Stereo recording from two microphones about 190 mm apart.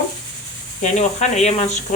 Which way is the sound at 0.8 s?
40° left (ahead or behind).